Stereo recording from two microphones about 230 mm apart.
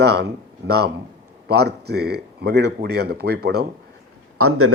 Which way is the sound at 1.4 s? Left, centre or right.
Right.